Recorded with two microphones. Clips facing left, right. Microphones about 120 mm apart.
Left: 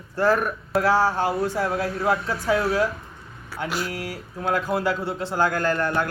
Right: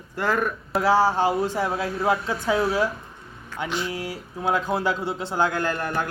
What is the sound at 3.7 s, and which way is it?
Speech, 5° left (ahead or behind).